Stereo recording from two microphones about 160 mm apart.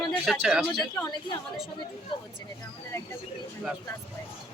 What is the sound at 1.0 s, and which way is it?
Speech, 25° left (ahead or behind).